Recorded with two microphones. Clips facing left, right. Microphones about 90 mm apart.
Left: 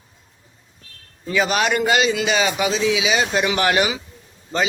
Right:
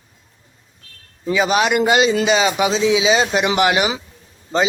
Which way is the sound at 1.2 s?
20° right (ahead or behind).